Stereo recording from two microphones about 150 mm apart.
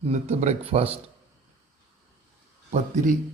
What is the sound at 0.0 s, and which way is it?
Speech, 45° right (ahead or behind).